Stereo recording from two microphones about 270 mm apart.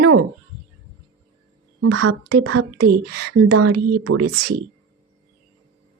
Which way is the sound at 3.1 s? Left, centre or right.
Right.